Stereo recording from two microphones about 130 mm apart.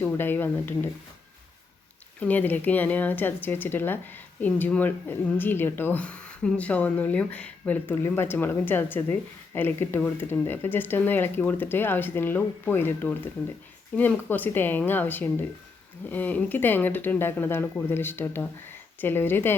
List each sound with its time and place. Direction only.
0.0 s speech: 15° left (ahead or behind)
2.2 s speech: 15° left (ahead or behind)